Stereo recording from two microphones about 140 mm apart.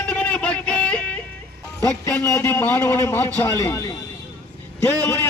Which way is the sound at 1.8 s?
20° left (ahead or behind).